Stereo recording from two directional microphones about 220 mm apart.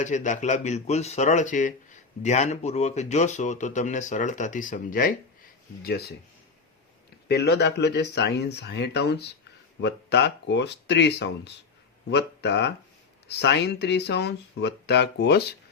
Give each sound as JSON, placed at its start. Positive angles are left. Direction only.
{"t": 0.0, "sound": "speech", "side_deg": 35}
{"t": 7.3, "sound": "speech", "side_deg": 50}